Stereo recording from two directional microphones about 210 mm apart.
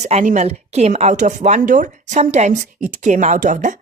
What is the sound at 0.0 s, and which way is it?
A woman's voice, 30° right (ahead or behind).